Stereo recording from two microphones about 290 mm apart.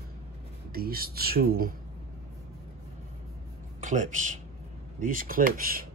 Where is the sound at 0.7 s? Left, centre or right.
Right.